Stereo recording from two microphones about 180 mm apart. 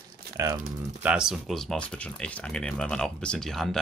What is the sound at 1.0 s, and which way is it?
Speech, 5° right (ahead or behind).